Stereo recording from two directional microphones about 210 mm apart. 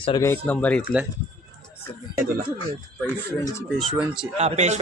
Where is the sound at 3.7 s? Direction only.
Centre (ahead or behind).